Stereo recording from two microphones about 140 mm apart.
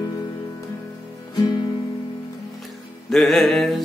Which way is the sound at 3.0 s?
Centre (ahead or behind).